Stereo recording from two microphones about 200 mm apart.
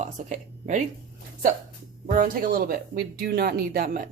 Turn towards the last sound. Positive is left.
turn(degrees=-50)  # may be behind; listen again after turning